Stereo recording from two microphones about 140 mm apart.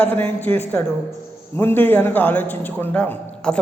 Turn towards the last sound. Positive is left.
turn(degrees=10)  # may be behind; listen again after turning